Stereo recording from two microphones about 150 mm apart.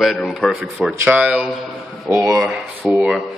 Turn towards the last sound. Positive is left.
turn(degrees=0)  # may be behind; listen again after turning